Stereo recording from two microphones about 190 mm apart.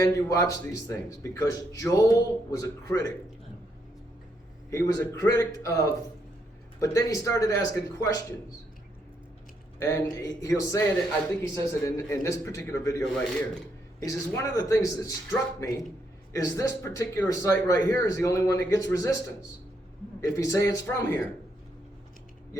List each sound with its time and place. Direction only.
0.0 s speech: 15° left (ahead or behind)
4.7 s speech: 15° left (ahead or behind)
9.7 s speech: 15° left (ahead or behind)
20.2 s speech: 15° left (ahead or behind)